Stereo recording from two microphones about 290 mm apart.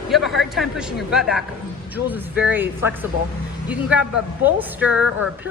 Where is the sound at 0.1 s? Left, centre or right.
Centre.